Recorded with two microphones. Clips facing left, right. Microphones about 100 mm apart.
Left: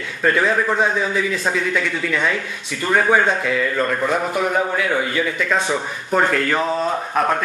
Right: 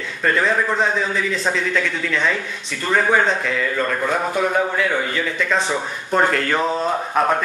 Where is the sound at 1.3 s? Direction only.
10° left (ahead or behind).